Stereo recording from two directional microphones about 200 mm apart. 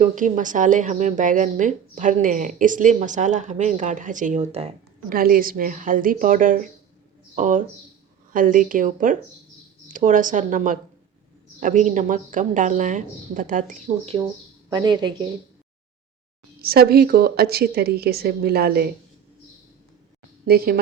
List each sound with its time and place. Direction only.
0.0 s a woman's voice: 40° right (ahead or behind)
5.0 s a woman's voice: 45° right (ahead or behind)
14.7 s a woman's voice: 20° right (ahead or behind)
16.6 s a woman's voice: 50° right (ahead or behind)